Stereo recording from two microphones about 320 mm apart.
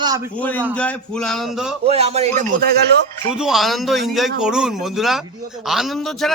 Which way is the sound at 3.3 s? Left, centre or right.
Centre.